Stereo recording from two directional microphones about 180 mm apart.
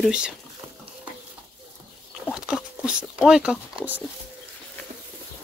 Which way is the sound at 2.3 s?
5° right (ahead or behind).